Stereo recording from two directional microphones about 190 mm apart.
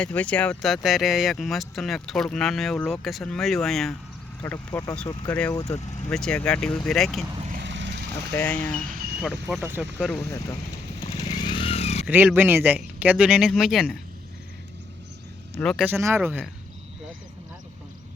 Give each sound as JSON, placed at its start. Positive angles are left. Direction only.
{"t": 0.0, "sound": "speech", "side_deg": 5}
{"t": 4.4, "sound": "speech", "side_deg": 15}
{"t": 6.1, "sound": "speech", "side_deg": 5}
{"t": 7.6, "sound": "vehicle", "side_deg": -70}
{"t": 8.4, "sound": "speech", "side_deg": 5}
{"t": 8.8, "sound": "speech", "side_deg": -45}
{"t": 9.2, "sound": "speech", "side_deg": 0}
{"t": 11.3, "sound": "vehicle", "side_deg": 25}
{"t": 12.0, "sound": "speech", "side_deg": -10}
{"t": 15.5, "sound": "speech", "side_deg": 0}
{"t": 15.9, "sound": "speech", "side_deg": -10}